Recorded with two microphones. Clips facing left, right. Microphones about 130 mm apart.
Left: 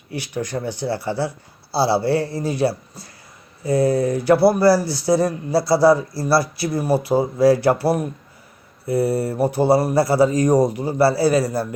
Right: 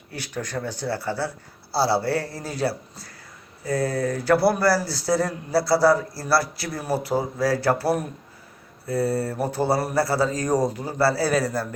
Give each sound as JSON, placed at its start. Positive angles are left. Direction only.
{"t": 0.1, "sound": "speech", "side_deg": 10}
{"t": 11.3, "sound": "a man's voice", "side_deg": 5}